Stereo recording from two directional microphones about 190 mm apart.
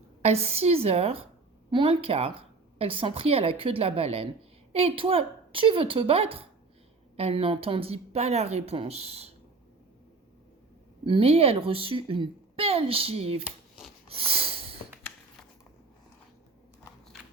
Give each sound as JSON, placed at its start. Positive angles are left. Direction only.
{"t": 0.2, "sound": "a woman's voice", "side_deg": -35}
{"t": 11.0, "sound": "a woman's voice", "side_deg": -30}
{"t": 13.4, "sound": "shuffling cards", "side_deg": -5}
{"t": 14.1, "sound": "snort", "side_deg": -30}